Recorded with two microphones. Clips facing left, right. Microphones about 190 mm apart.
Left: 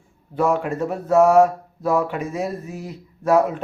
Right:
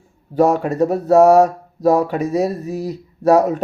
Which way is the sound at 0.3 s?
40° right (ahead or behind).